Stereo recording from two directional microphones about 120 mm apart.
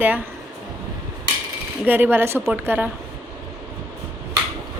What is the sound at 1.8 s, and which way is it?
A woman's voice, 15° right (ahead or behind).